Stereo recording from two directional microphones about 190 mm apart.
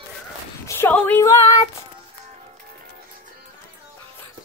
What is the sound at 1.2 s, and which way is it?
Female singing, 20° left (ahead or behind).